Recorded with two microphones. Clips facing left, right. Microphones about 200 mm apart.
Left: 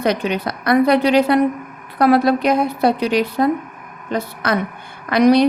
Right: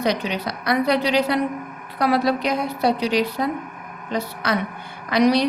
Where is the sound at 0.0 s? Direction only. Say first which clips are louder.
Left 4 dB; 55° left (ahead or behind).